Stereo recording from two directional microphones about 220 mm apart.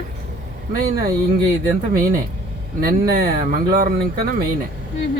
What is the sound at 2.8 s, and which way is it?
Speech, 45° right (ahead or behind).